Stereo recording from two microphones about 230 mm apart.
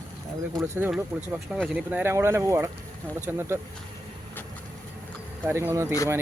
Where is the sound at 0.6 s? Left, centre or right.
Centre.